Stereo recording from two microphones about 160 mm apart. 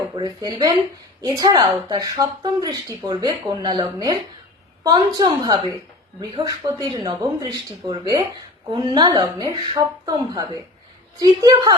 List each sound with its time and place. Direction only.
0.2 s speech: 25° right (ahead or behind)